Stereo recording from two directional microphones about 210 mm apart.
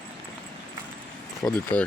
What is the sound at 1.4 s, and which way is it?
Speech, 10° left (ahead or behind).